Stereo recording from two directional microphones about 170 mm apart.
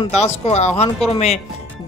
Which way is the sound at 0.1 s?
40° left (ahead or behind).